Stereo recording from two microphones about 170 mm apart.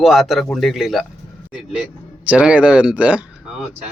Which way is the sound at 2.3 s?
5° right (ahead or behind).